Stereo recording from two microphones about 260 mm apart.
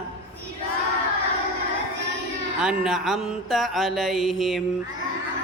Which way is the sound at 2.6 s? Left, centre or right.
Centre.